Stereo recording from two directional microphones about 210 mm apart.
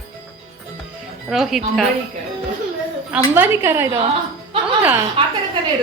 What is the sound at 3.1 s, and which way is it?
Speech, 10° right (ahead or behind).